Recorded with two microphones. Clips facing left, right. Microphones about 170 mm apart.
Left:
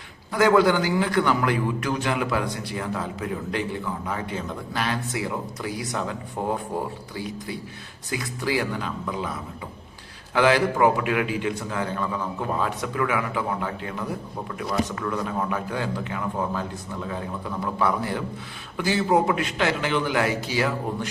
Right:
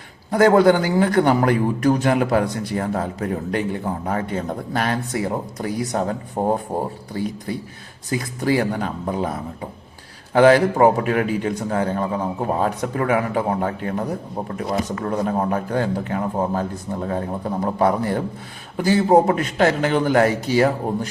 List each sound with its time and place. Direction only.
0.3 s a man's voice: 50° right (ahead or behind)
7.1 s a man's voice: 50° right (ahead or behind)